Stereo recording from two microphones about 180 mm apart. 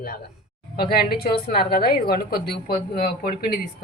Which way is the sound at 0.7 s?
60° left (ahead or behind).